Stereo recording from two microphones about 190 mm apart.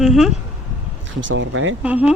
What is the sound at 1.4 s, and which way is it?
Speech, 90° right.